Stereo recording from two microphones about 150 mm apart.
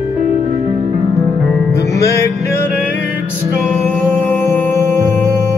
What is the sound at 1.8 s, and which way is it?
Music, 20° left (ahead or behind).